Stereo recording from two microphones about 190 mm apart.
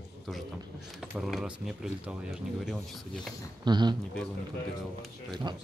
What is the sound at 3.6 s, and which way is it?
Speech, 25° right (ahead or behind).